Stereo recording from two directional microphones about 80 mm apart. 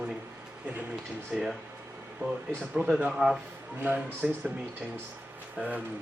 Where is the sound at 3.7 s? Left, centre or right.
Right.